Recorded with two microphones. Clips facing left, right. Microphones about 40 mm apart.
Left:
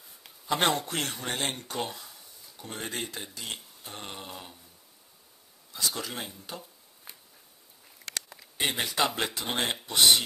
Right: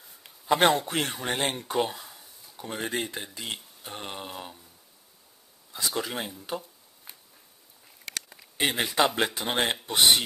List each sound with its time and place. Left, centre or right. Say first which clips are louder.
0.6 s speech: right 4 dB; centre
0.8 s speech: right 4 dB; centre
5.7 s speech: right 3 dB; right
7.1 s a sound: even; centre
9.0 s speech: right 4 dB; centre
9.9 s speech: right 1 dB; right